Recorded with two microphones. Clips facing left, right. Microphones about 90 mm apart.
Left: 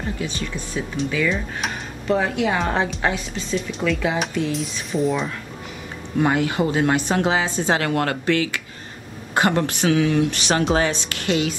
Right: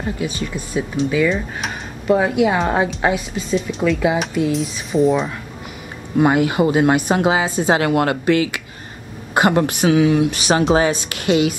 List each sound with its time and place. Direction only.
0.2 s a woman's voice: 10° right (ahead or behind)
6.1 s a woman's voice: 15° right (ahead or behind)